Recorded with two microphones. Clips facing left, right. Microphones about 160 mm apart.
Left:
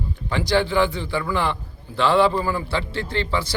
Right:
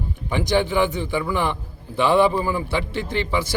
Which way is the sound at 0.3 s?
15° right (ahead or behind).